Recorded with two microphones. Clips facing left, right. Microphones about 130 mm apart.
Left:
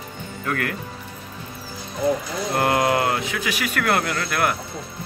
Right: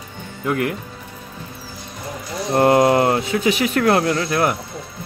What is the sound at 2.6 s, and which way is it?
Speech, 30° right (ahead or behind).